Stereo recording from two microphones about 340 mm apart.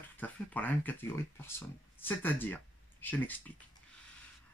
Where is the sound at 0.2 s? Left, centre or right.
Centre.